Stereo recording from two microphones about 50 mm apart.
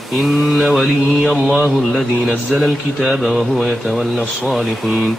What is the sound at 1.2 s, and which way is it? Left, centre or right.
Speech, centre.